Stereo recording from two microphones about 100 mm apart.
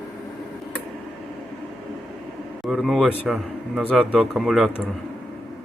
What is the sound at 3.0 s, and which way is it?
Speech, 15° left (ahead or behind).